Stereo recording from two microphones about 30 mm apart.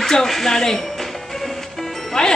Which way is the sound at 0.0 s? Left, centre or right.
Centre.